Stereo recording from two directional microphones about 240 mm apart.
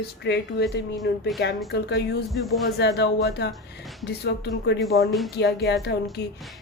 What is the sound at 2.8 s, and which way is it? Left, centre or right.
A woman's voice, left.